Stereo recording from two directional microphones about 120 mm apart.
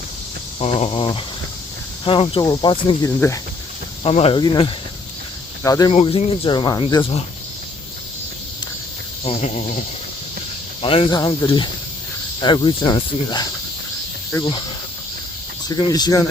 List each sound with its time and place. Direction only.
0.6 s speech: 60° left (ahead or behind)
2.4 s cricket: 35° left (ahead or behind)
3.0 s speech: 25° left (ahead or behind)
4.0 s speech: 55° left (ahead or behind)
4.4 s speech: 45° left (ahead or behind)
5.6 s speech: 30° left (ahead or behind)
5.9 s speech: 55° left (ahead or behind); by 6.8 s 35° left (ahead or behind)
6.9 s speech: 45° left (ahead or behind)
9.2 s speech: 60° left (ahead or behind)
10.8 s speech: 50° left (ahead or behind)
12.4 s cricket: 35° left (ahead or behind)
15.8 s cricket: 35° left (ahead or behind)